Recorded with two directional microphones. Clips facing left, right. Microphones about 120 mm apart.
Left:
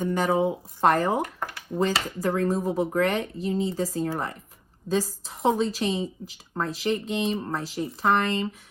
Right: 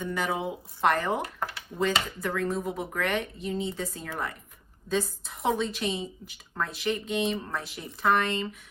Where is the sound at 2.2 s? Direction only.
35° left (ahead or behind).